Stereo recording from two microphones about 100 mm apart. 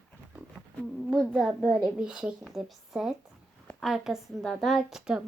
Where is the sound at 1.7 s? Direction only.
10° right (ahead or behind).